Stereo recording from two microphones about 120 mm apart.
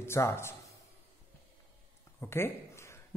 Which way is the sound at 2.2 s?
20° left (ahead or behind).